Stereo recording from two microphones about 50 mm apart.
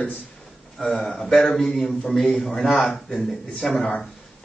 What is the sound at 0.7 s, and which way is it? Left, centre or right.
A man's voice, centre.